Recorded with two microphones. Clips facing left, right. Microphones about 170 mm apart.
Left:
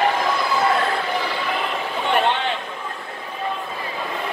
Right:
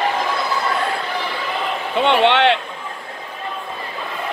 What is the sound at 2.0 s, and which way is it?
Vehicle, 80° right.